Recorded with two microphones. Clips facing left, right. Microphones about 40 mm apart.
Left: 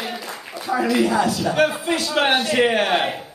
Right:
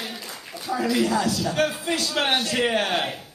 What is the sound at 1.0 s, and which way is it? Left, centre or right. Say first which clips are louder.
A man's voice: left 4 dB; left.